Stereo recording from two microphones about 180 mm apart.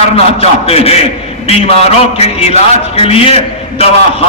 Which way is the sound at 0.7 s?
35° left (ahead or behind).